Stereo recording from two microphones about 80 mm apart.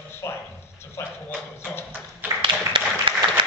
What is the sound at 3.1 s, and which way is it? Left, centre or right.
Applause, right.